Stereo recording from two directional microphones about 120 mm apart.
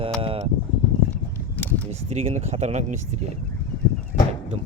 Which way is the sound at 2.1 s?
65° right (ahead or behind).